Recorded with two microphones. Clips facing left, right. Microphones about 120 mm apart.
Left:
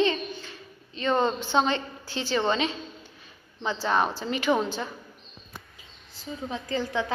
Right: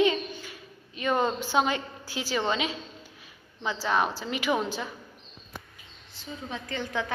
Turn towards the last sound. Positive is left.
turn(degrees=30)  # may be behind; listen again after turning